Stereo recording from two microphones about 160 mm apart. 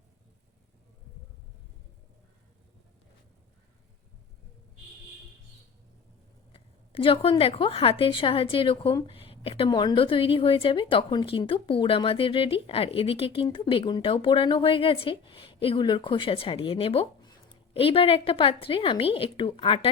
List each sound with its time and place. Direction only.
6.5 s a woman's voice: 35° left (ahead or behind)